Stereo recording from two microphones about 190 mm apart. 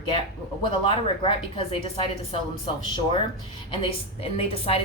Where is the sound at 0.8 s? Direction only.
30° left (ahead or behind).